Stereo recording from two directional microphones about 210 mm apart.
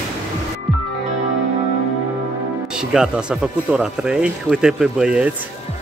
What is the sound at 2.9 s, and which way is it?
Speech, 5° right (ahead or behind).